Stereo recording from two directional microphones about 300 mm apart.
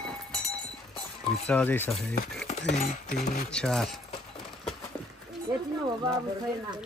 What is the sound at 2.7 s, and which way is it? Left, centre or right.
Speech, left.